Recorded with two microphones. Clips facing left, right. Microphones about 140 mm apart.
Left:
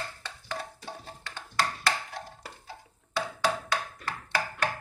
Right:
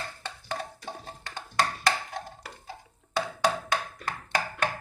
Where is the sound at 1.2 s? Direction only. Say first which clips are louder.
Right 2 dB; 15° right (ahead or behind).